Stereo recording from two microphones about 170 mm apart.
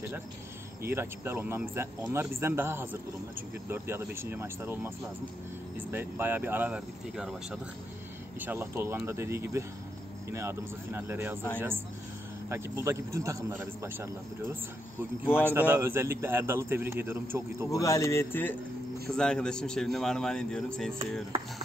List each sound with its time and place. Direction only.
0.8 s a man's voice: 15° right (ahead or behind)
8.4 s a man's voice: 15° right (ahead or behind)
12.4 s a man's voice: 15° right (ahead or behind)
15.2 s speech: 15° left (ahead or behind)
15.7 s a man's voice: 15° right (ahead or behind)
17.6 s a man's voice: 20° left (ahead or behind)